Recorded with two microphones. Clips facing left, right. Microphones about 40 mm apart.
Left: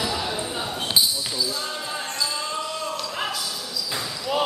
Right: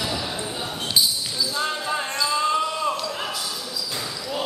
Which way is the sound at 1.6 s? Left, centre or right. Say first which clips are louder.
Right 5 dB; right.